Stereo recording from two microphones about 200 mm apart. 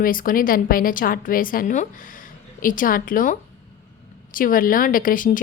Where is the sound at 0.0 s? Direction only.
45° left (ahead or behind).